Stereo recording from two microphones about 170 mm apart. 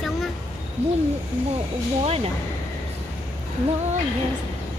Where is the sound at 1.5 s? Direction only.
35° right (ahead or behind).